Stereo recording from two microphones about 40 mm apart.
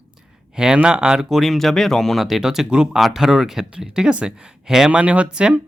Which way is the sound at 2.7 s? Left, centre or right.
Right.